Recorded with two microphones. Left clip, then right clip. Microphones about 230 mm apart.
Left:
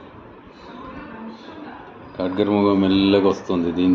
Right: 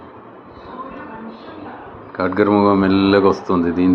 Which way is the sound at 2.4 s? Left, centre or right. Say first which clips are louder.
Right 4 dB; right.